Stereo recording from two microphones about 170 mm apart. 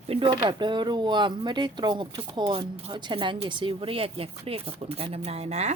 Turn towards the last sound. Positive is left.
turn(degrees=-40)  # may be behind; listen again after turning